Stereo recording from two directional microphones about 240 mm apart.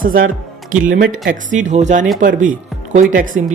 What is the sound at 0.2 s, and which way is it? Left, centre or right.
Speech, right.